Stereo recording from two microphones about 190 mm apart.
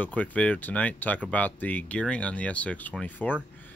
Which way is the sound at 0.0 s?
10° left (ahead or behind).